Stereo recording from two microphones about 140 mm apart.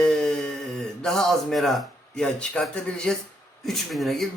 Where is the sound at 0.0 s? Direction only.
5° left (ahead or behind).